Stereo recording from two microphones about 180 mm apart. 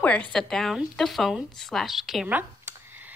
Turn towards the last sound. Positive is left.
turn(degrees=-10)  # may be behind; listen again after turning